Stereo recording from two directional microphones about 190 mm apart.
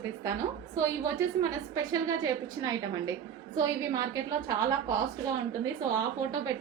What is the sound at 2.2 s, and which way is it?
A woman's voice, 20° right (ahead or behind).